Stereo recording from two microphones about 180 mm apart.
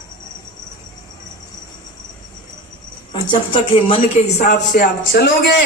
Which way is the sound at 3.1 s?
30° left (ahead or behind).